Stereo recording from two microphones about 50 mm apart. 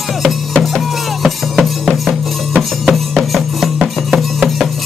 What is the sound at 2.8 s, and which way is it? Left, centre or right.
Music, centre.